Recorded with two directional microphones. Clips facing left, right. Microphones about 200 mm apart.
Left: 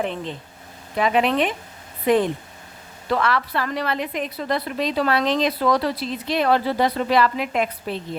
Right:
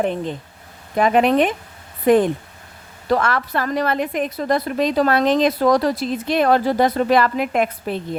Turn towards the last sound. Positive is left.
turn(degrees=-50)  # may be behind; listen again after turning